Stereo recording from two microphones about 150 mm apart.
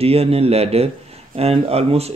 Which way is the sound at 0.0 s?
40° right (ahead or behind).